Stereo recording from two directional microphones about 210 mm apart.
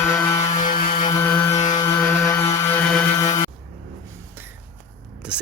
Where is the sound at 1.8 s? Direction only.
15° left (ahead or behind).